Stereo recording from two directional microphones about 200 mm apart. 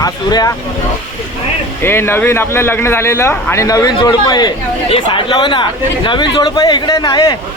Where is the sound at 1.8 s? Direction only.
10° left (ahead or behind).